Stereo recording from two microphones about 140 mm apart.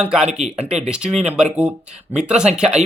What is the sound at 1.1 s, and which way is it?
Speech, 50° right (ahead or behind).